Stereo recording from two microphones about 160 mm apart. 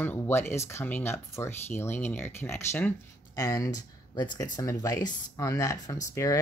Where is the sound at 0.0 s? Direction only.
15° left (ahead or behind).